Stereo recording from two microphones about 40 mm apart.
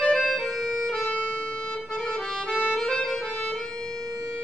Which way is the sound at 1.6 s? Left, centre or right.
Left.